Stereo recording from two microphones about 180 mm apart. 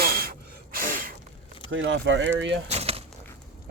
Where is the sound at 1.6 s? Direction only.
90° right.